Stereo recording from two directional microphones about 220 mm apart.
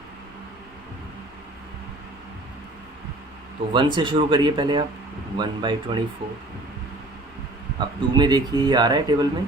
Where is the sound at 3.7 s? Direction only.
20° right (ahead or behind).